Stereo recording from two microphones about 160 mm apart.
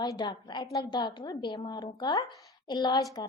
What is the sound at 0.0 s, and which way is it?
A woman's voice, 25° left (ahead or behind).